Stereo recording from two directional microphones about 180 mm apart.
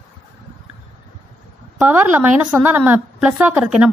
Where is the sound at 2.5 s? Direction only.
10° right (ahead or behind).